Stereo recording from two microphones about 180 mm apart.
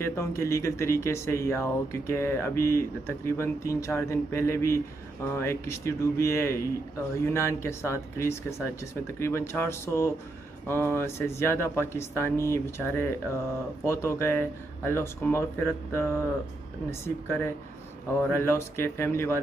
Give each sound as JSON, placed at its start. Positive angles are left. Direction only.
{"t": 0.0, "sound": "speech", "side_deg": 15}